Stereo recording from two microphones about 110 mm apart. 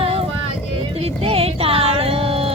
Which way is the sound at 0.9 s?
65° right (ahead or behind).